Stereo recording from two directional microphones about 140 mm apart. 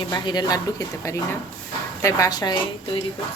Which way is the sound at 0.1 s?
30° left (ahead or behind).